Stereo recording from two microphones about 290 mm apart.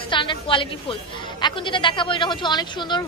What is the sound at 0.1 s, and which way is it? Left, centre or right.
Speech, centre.